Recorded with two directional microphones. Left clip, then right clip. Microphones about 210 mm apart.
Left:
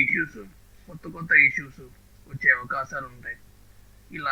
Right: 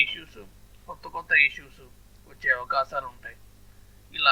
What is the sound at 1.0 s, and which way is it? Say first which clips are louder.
A man's voice: left 3 dB; 15° right (ahead or behind).